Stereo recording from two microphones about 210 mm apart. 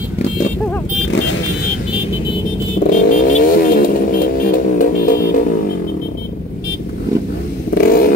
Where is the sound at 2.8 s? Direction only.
40° left (ahead or behind).